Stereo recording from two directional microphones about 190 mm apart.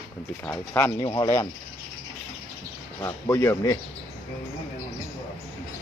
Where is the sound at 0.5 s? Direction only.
10° left (ahead or behind).